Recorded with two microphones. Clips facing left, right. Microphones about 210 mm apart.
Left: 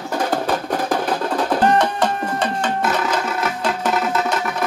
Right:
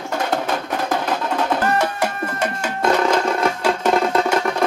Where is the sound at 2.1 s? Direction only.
70° right (ahead or behind).